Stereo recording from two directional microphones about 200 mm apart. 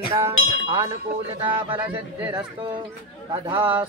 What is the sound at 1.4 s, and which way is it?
Speech, 25° right (ahead or behind).